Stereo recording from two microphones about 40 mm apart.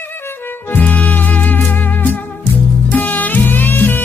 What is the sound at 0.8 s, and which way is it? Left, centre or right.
Music, left.